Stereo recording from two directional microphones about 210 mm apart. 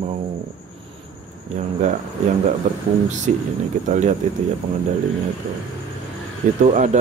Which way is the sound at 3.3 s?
35° right (ahead or behind).